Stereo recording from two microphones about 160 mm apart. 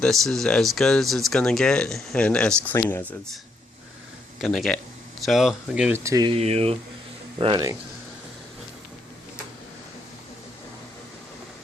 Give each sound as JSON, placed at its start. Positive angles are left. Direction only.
{"t": 0.0, "sound": "speech", "side_deg": 5}
{"t": 4.4, "sound": "speech", "side_deg": 5}
{"t": 6.0, "sound": "speech", "side_deg": -20}
{"t": 6.2, "sound": "speech", "side_deg": -40}
{"t": 7.3, "sound": "speech", "side_deg": -30}